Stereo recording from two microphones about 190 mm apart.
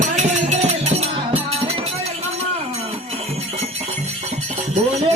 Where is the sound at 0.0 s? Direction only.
35° right (ahead or behind).